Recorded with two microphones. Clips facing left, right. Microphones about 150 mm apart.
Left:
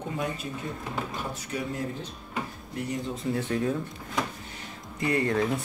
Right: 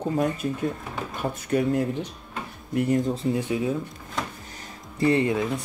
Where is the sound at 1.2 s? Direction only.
55° right (ahead or behind).